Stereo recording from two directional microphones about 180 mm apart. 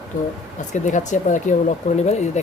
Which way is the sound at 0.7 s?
40° left (ahead or behind).